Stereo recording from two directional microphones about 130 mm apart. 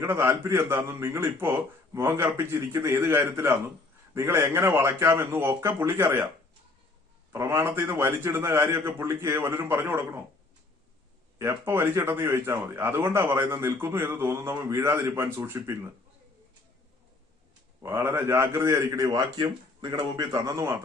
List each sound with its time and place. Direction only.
0.0 s a man's voice: 15° right (ahead or behind)
7.3 s a man's voice: 20° right (ahead or behind)
11.3 s speech: 20° right (ahead or behind)
17.8 s speech: 20° right (ahead or behind)